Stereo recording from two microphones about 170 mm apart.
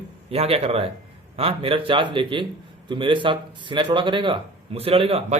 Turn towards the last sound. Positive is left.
turn(degrees=-35)  # may be behind; listen again after turning